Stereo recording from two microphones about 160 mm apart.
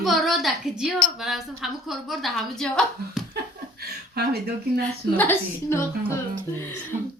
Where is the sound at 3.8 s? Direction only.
85° right.